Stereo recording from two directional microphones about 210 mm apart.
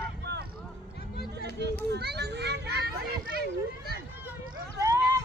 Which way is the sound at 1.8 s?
50° right (ahead or behind).